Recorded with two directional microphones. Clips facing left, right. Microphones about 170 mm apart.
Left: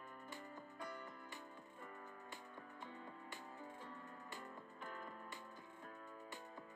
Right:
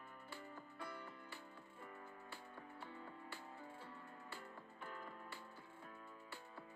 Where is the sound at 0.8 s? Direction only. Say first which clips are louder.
Left 1 dB; 45° left (ahead or behind).